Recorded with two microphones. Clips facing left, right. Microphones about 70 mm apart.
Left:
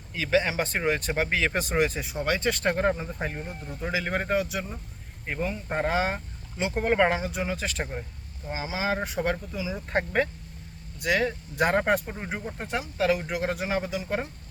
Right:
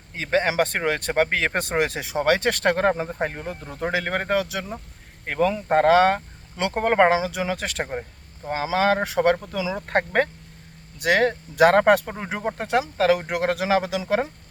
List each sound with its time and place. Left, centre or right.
0.1 s speech: right
0.5 s speech: right
5.2 s speech: right
5.6 s speech: right
6.7 s speech: right
7.1 s speech: right
9.7 s speech: right
11.0 s speech: right